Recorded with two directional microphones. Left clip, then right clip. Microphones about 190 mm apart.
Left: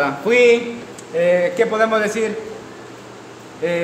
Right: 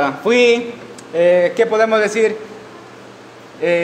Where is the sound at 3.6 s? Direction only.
30° right (ahead or behind).